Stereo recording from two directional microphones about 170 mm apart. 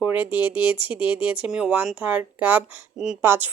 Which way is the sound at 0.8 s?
30° left (ahead or behind).